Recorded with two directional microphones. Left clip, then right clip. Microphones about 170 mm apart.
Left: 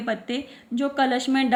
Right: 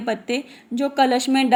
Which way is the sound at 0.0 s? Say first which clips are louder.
Right 4 dB; 35° right (ahead or behind).